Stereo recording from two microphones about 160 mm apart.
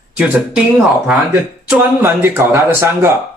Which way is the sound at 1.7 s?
15° right (ahead or behind).